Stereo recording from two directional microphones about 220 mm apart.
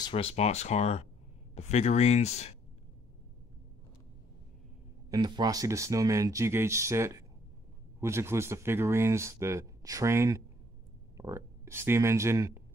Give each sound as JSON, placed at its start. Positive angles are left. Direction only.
{"t": 0.0, "sound": "speech", "side_deg": 25}
{"t": 5.1, "sound": "speech", "side_deg": -20}